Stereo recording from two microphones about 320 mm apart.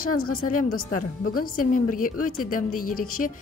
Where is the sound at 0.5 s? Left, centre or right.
Left.